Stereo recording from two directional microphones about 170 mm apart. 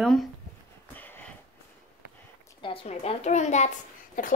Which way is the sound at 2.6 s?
35° left (ahead or behind).